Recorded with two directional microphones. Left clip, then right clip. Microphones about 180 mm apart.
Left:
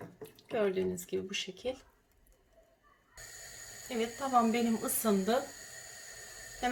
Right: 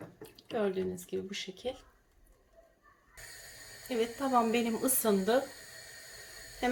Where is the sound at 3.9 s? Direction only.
15° right (ahead or behind).